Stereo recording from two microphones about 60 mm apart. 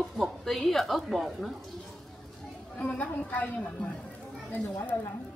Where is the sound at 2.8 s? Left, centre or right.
Left.